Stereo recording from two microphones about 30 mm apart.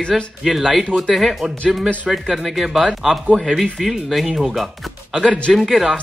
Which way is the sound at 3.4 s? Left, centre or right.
Centre.